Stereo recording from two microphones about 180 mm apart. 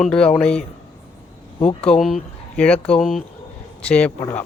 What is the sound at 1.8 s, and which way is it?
Speech, centre (ahead or behind).